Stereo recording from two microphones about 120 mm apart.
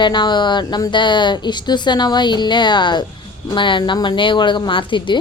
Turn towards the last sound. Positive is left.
turn(degrees=45)  # may be behind; listen again after turning